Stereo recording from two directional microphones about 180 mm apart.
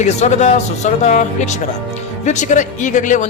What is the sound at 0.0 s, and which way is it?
Speech, 40° left (ahead or behind).